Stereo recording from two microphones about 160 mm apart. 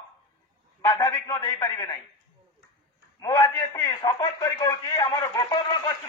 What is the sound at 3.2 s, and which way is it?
A man's voice, 20° left (ahead or behind).